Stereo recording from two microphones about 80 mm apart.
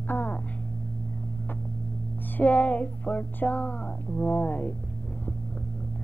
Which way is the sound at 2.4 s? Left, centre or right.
Centre.